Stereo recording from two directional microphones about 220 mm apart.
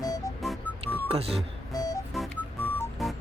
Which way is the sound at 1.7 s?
15° left (ahead or behind).